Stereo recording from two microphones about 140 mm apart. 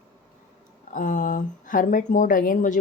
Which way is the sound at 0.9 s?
65° left (ahead or behind).